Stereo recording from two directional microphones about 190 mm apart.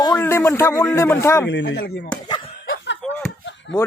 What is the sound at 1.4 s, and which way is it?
Speech, 65° left (ahead or behind).